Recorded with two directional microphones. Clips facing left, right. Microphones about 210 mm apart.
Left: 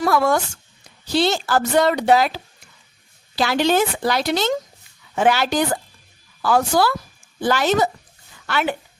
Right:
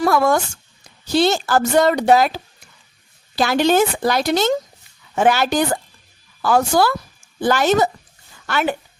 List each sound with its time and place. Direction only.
0.0 s a woman's voice: 45° right (ahead or behind)